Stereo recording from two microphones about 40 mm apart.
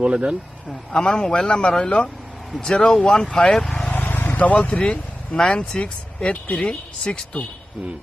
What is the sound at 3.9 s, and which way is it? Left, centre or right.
Vehicle, left.